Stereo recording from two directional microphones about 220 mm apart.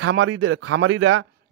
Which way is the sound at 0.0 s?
65° right (ahead or behind).